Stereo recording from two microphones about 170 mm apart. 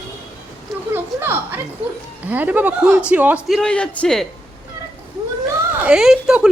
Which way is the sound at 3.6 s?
5° left (ahead or behind).